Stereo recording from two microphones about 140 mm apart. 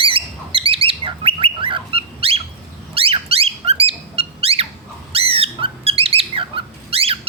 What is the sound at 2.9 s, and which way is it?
Squeak, 45° right (ahead or behind).